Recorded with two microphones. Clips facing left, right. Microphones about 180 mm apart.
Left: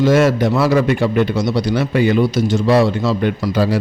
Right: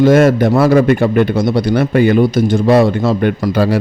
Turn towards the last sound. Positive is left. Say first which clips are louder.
# right 3 dB
turn(degrees=-60)  # may be behind; listen again after turning